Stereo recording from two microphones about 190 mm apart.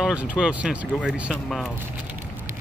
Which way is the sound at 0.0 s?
5° right (ahead or behind).